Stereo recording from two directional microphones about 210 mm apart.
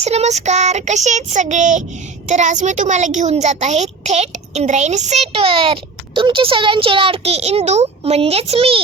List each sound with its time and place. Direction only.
0.0 s speech: 30° right (ahead or behind)